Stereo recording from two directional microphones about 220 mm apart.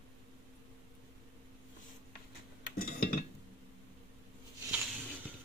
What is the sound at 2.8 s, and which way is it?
Dishes, 40° left (ahead or behind).